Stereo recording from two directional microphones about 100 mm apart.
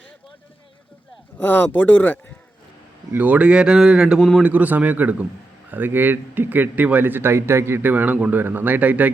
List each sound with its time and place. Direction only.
1.4 s speech: 20° left (ahead or behind)
3.1 s speech: 15° right (ahead or behind)
4.4 s speech: 15° right (ahead or behind)